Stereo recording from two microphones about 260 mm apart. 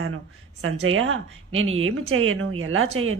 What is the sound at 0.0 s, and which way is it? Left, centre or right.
Speech, right.